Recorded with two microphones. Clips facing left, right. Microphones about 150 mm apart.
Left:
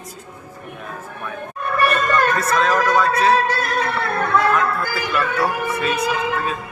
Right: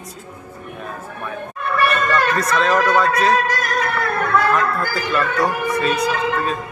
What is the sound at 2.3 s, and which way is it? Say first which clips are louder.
Speech: right 1 dB; centre (ahead or behind).